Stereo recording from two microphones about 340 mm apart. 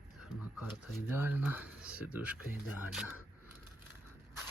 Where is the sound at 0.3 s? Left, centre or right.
Centre.